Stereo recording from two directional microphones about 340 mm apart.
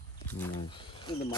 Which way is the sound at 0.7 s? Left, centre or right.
Centre.